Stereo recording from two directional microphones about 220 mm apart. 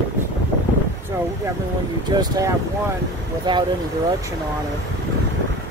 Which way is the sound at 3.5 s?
20° right (ahead or behind).